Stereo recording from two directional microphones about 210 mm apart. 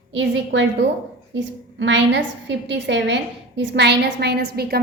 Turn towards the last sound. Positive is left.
turn(degrees=-50)  # may be behind; listen again after turning